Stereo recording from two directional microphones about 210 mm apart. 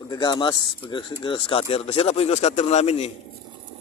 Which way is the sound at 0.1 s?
20° left (ahead or behind).